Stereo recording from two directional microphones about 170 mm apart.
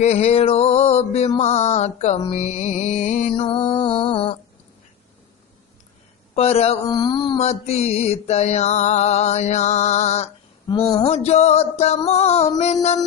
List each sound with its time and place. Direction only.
0.0 s mantra: 40° left (ahead or behind)
2.3 s music: 40° left (ahead or behind)
3.3 s music: 30° left (ahead or behind)
6.3 s mantra: 35° left (ahead or behind)
6.8 s music: 25° left (ahead or behind)
7.3 s mantra: 40° left (ahead or behind)
10.7 s music: 25° left (ahead or behind)
11.0 s mantra: 40° left (ahead or behind)